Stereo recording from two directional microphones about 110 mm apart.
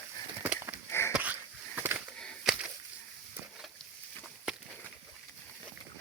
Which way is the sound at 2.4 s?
5° right (ahead or behind).